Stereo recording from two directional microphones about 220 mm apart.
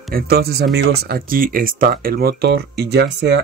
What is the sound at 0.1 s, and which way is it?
Speech, 45° right (ahead or behind).